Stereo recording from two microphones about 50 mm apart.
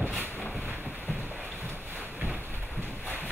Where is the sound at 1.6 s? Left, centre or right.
Right.